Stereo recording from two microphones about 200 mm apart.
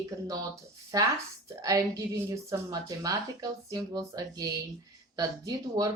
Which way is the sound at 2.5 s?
20° right (ahead or behind).